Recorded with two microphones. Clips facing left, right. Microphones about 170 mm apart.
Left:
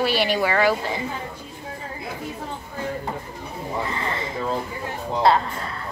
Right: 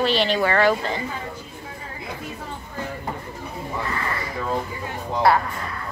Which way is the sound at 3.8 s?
20° left (ahead or behind).